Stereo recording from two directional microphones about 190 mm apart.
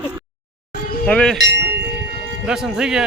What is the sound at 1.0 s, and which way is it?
Speech, 5° left (ahead or behind).